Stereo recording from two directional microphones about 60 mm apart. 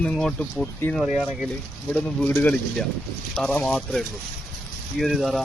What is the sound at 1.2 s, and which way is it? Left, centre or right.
Speech, centre.